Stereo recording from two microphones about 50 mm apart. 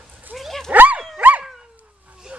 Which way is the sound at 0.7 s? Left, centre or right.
Right.